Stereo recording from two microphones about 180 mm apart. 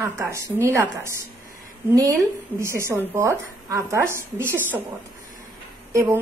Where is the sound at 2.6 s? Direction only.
15° right (ahead or behind).